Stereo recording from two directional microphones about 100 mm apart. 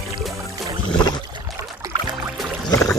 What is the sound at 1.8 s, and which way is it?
Music, 35° right (ahead or behind).